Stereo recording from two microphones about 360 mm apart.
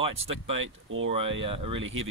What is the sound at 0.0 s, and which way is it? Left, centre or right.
Speech, centre.